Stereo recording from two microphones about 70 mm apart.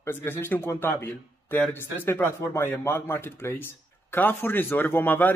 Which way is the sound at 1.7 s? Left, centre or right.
Left.